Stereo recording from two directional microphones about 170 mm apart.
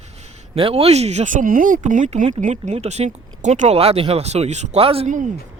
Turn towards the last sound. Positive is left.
turn(degrees=-35)  # may be behind; listen again after turning